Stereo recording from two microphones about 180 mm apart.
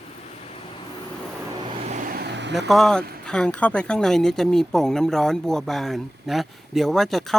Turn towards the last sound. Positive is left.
turn(degrees=0)  # may be behind; listen again after turning